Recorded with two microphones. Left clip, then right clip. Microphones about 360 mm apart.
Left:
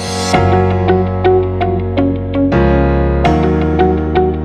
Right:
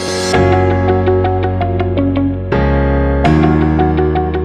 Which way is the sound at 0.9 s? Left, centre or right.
Centre.